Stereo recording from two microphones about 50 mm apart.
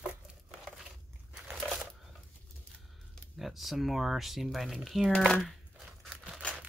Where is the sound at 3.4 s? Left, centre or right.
Centre.